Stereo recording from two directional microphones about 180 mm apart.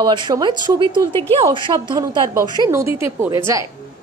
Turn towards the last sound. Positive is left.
turn(degrees=-15)  # may be behind; listen again after turning